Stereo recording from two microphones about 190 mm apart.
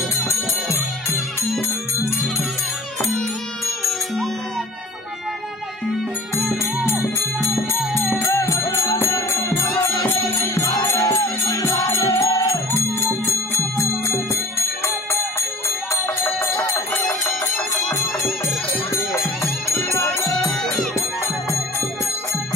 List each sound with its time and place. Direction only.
7.5 s music: centre (ahead or behind)
8.4 s music: 15° left (ahead or behind)
16.7 s music: centre (ahead or behind)
19.8 s music: 15° left (ahead or behind)